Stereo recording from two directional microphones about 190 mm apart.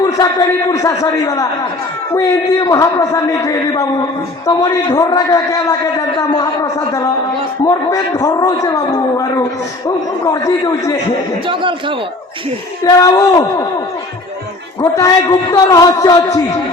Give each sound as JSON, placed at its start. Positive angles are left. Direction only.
{"t": 0.0, "sound": "a man's voice", "side_deg": 15}
{"t": 11.4, "sound": "a man's voice", "side_deg": -25}
{"t": 12.8, "sound": "a man's voice", "side_deg": 15}
{"t": 14.8, "sound": "a man's voice", "side_deg": 20}